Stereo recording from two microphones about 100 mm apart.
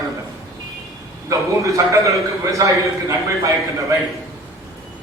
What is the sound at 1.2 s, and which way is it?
A man's voice, 30° right (ahead or behind).